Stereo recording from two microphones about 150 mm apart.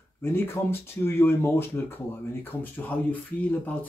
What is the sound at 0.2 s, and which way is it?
Speech, 15° left (ahead or behind).